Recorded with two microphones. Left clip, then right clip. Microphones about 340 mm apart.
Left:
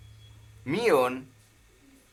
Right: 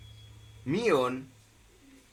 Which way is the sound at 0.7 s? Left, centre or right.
Left.